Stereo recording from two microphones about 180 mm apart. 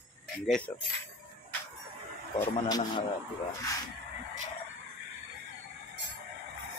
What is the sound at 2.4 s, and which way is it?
Speech, 20° left (ahead or behind).